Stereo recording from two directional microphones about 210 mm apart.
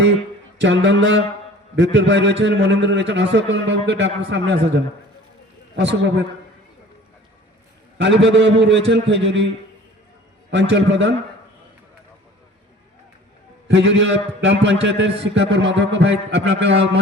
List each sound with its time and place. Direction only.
0.6 s a man's voice: 60° right (ahead or behind)
5.7 s a man's voice: 55° right (ahead or behind)
7.9 s a man's voice: 60° right (ahead or behind)
10.5 s a man's voice: 60° right (ahead or behind)
13.7 s a man's voice: 60° right (ahead or behind)